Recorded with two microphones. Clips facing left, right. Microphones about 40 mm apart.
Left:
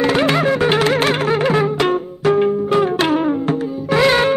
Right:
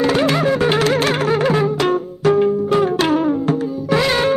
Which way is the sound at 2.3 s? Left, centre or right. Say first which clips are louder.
Even; left.